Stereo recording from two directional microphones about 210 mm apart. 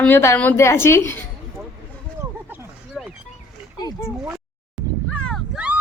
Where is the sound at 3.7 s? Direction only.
20° left (ahead or behind).